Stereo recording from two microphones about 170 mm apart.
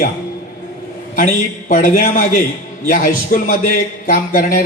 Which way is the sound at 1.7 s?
55° left (ahead or behind).